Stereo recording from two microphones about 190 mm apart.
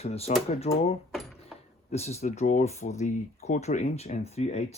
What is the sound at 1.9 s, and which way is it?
Speech, 35° left (ahead or behind).